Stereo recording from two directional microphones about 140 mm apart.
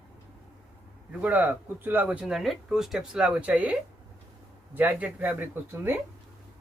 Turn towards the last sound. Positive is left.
turn(degrees=-15)  # may be behind; listen again after turning